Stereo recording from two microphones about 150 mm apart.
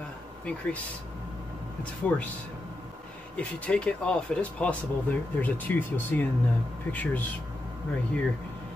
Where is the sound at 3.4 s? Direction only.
10° left (ahead or behind).